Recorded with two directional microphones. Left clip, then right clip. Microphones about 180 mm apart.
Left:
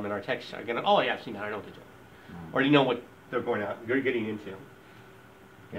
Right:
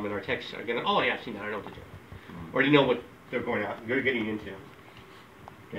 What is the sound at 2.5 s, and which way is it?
Speech, 30° left (ahead or behind).